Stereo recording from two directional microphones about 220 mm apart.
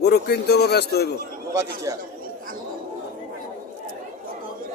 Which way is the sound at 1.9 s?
15° right (ahead or behind).